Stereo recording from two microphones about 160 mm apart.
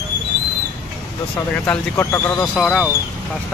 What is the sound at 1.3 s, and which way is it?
Speech, 10° left (ahead or behind).